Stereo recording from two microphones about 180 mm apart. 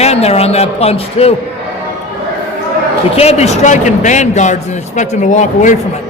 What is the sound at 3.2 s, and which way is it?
A man's voice, 35° left (ahead or behind).